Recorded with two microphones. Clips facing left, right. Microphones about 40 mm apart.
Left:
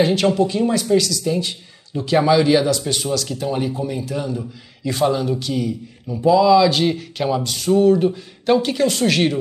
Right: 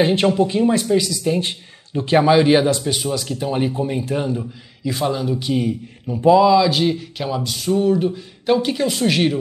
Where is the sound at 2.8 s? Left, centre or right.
Centre; by 4.4 s right.